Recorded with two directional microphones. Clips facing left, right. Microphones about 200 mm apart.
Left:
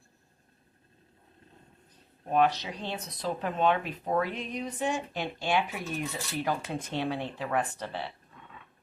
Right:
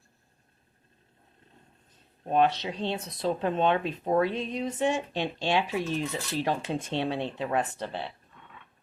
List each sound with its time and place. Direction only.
2.3 s speech: 25° right (ahead or behind)